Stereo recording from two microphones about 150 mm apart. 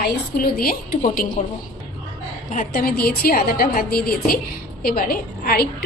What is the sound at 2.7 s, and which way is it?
A woman's voice, 80° left.